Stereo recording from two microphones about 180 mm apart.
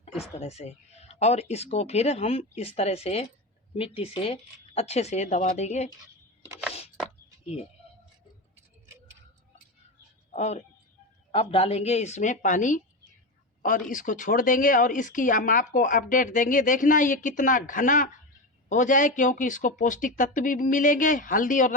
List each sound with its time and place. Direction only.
0.2 s speech: 35° left (ahead or behind)
6.5 s a sound: 5° right (ahead or behind)
7.4 s speech: 35° left (ahead or behind)
10.3 s speech: 35° left (ahead or behind)